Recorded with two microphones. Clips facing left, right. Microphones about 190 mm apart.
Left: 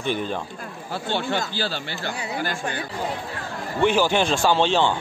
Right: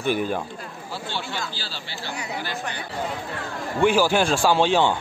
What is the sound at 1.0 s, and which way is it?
Speech, 55° left (ahead or behind).